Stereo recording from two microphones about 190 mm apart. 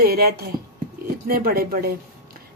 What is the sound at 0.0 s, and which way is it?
Speech, 55° right (ahead or behind).